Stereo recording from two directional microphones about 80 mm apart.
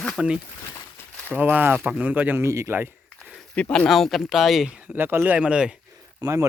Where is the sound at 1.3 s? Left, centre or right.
Right.